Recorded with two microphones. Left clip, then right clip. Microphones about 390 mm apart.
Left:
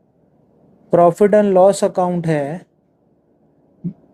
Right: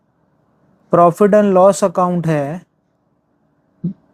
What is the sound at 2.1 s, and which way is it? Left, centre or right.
Speech, right.